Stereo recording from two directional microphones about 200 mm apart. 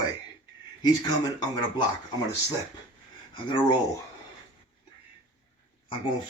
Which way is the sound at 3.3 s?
25° left (ahead or behind).